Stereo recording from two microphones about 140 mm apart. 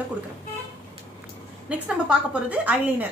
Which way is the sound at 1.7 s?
10° right (ahead or behind).